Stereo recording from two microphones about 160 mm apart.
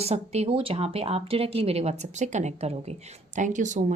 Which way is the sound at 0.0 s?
40° right (ahead or behind).